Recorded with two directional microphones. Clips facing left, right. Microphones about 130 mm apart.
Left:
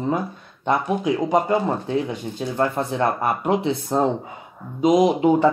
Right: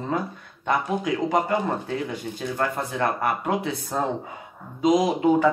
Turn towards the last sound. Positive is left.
turn(degrees=25)  # may be behind; listen again after turning